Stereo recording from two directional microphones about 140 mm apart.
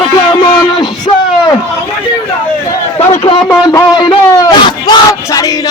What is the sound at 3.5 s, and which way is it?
A man's voice, 25° left (ahead or behind).